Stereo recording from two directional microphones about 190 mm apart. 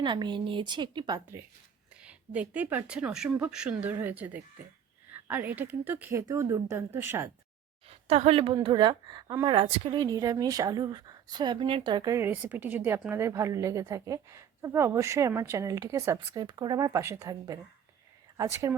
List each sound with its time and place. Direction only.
0.0 s a woman's voice: 25° right (ahead or behind)
2.0 s a woman's voice: 5° right (ahead or behind)
7.9 s a woman's voice: 35° right (ahead or behind); by 18.8 s 15° right (ahead or behind)